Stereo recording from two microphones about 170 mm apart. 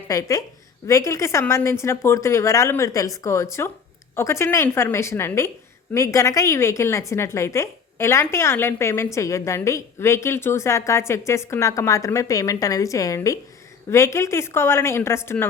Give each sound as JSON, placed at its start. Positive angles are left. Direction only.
{"t": 0.1, "sound": "a woman's voice", "side_deg": 20}